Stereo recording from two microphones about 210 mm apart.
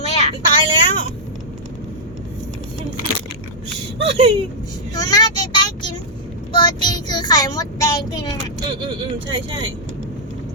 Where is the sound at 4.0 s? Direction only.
25° right (ahead or behind).